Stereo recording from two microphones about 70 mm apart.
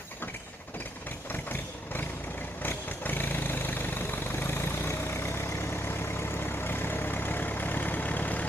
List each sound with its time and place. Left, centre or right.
1.3 s vehicle: left